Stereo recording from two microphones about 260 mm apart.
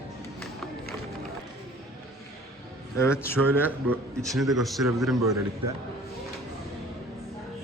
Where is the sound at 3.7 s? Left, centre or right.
Centre.